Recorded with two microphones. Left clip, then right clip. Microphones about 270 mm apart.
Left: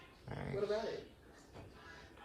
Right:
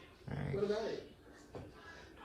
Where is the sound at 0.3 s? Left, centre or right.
Centre.